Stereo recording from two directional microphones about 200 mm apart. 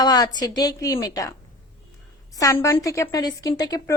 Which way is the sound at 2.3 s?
15° left (ahead or behind).